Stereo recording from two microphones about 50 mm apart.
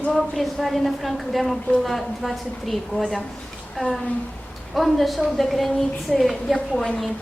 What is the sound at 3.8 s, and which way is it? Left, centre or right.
Speech, left.